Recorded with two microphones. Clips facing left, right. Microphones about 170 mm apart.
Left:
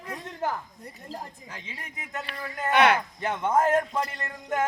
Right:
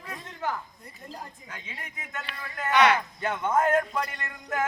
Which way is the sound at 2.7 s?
55° left (ahead or behind).